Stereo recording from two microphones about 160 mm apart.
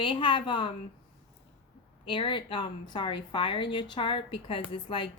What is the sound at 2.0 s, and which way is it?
A woman's voice, 30° left (ahead or behind).